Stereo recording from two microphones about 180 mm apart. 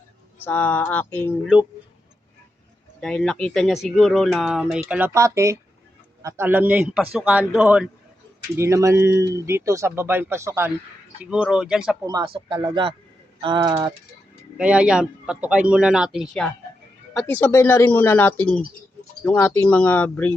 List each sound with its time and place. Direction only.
0.4 s speech: 10° left (ahead or behind)
3.0 s speech: 5° left (ahead or behind)
12.0 s speech: 25° right (ahead or behind)
14.6 s speech: 5° right (ahead or behind)
17.2 s speech: 10° left (ahead or behind)